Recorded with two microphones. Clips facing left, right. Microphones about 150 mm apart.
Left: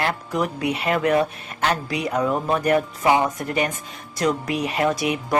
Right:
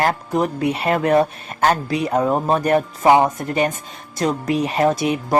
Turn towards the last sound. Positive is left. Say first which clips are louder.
# right 4 dB
turn(degrees=-30)  # may be behind; listen again after turning